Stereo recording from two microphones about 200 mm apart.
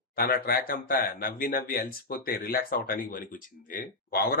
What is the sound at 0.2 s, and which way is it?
Speech, 50° left (ahead or behind).